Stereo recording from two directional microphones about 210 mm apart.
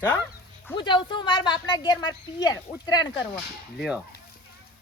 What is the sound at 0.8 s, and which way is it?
Speech, 20° left (ahead or behind).